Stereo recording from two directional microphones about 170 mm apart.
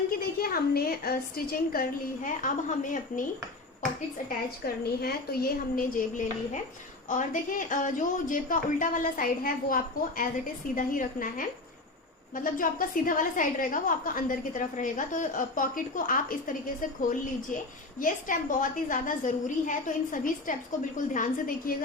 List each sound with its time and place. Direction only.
0.3 s a woman's voice: 65° left (ahead or behind)
4.6 s a woman's voice: 65° left (ahead or behind)
18.0 s a woman's voice: 50° left (ahead or behind)